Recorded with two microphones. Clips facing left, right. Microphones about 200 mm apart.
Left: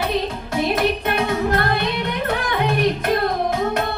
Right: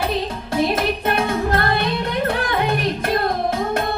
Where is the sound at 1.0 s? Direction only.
40° right (ahead or behind).